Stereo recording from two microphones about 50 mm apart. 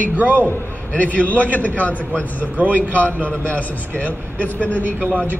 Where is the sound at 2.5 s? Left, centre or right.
Right.